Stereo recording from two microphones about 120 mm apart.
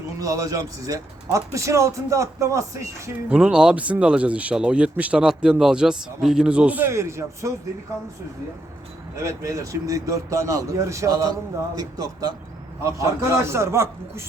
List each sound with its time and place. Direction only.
0.2 s speech: 30° right (ahead or behind)
3.2 s speech: 5° right (ahead or behind); by 7.5 s 25° right (ahead or behind)
9.1 s speech: 25° right (ahead or behind)